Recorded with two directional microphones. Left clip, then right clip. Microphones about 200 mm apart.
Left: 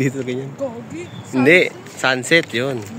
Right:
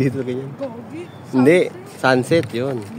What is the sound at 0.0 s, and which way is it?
Speech, centre (ahead or behind).